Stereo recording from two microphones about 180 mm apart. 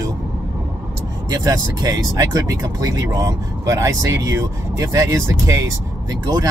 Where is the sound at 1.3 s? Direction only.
20° right (ahead or behind).